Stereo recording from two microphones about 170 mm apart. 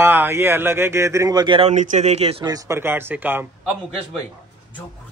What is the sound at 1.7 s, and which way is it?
Speech, 45° right (ahead or behind).